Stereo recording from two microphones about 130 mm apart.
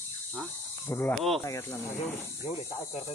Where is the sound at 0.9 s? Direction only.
20° left (ahead or behind).